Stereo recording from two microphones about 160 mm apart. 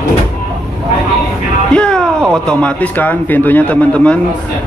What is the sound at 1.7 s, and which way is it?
Speech, 5° left (ahead or behind).